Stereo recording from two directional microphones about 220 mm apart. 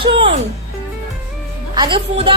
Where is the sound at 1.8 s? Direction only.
25° right (ahead or behind).